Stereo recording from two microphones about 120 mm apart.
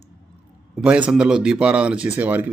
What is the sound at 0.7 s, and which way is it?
Speech, 10° right (ahead or behind).